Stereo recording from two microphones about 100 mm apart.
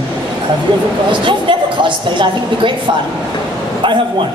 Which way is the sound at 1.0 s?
55° right (ahead or behind).